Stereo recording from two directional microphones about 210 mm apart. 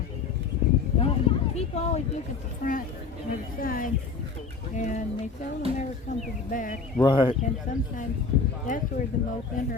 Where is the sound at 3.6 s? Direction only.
40° left (ahead or behind).